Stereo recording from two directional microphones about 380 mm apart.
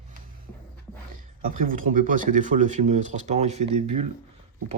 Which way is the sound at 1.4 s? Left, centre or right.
Right.